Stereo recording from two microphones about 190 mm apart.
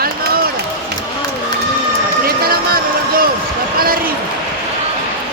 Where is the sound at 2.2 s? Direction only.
55° right (ahead or behind).